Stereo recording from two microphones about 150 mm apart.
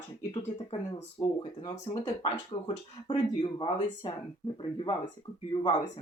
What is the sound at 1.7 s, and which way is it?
Speech, 50° left (ahead or behind).